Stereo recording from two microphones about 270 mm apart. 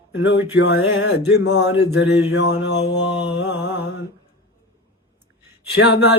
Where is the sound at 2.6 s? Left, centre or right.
Left.